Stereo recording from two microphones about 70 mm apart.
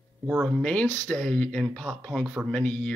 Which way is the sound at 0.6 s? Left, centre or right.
Centre.